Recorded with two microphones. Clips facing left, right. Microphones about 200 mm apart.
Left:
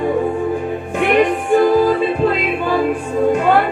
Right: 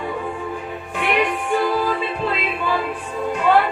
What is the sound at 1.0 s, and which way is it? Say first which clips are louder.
Music: left 6 dB; 45° left (ahead or behind).